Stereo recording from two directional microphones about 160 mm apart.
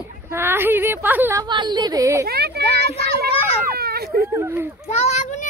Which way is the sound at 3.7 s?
75° right (ahead or behind).